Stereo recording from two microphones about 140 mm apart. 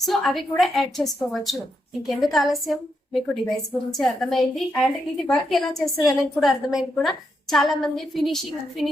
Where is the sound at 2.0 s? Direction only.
Centre (ahead or behind).